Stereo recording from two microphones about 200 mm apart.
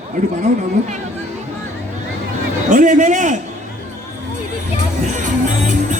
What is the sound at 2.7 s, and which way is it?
Speech, 40° right (ahead or behind).